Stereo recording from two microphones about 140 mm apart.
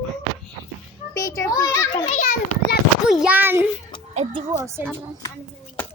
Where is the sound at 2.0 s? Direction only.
75° left (ahead or behind).